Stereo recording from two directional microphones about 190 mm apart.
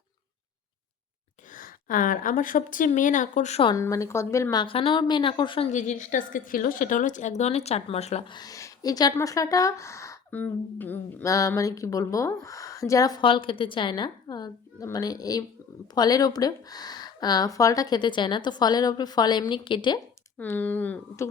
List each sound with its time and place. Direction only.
1.5 s speech: 45° left (ahead or behind); by 3.8 s 30° left (ahead or behind)
3.8 s speech: 15° left (ahead or behind)
4.6 s speech: 30° left (ahead or behind)
5.7 s a woman's voice: 40° left (ahead or behind)
8.4 s speech: 20° left (ahead or behind)
20.4 s speech: 10° left (ahead or behind)